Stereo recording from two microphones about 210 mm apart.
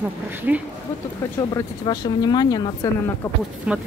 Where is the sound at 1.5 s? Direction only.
20° left (ahead or behind).